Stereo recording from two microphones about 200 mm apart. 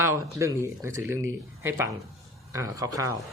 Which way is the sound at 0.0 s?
15° right (ahead or behind).